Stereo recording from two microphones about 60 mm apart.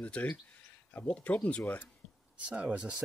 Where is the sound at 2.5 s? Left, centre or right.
Centre.